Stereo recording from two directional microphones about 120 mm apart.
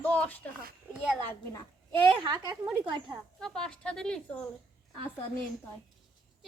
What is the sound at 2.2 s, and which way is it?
Speech, 40° right (ahead or behind).